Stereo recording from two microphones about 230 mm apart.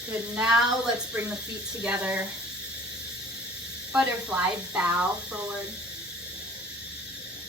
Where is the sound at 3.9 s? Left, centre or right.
Centre.